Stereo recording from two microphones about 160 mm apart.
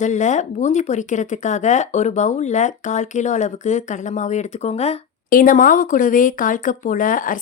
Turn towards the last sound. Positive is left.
turn(degrees=60)  # may be behind; listen again after turning